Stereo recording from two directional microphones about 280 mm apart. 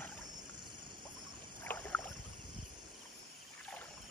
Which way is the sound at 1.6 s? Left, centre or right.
Centre.